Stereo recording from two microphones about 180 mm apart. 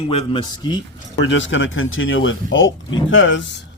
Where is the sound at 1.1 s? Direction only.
90° left.